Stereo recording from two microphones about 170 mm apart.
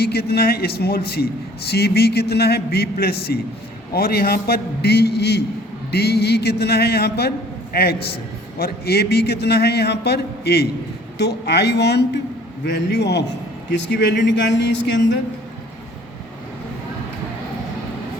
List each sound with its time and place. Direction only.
0.0 s a man's voice: 70° left (ahead or behind)
12.6 s a man's voice: 90° left